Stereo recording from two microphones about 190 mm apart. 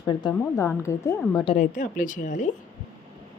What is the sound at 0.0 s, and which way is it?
Speech, 20° left (ahead or behind).